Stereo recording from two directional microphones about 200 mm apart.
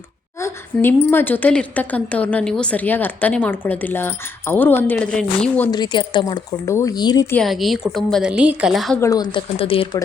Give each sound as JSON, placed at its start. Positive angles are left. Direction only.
{"t": 0.3, "sound": "a woman's voice", "side_deg": 10}
{"t": 5.7, "sound": "speech", "side_deg": 20}
{"t": 7.3, "sound": "a woman's voice", "side_deg": 0}
{"t": 9.0, "sound": "speech", "side_deg": 20}